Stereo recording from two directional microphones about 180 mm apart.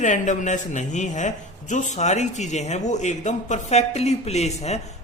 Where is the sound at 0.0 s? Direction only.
45° left (ahead or behind).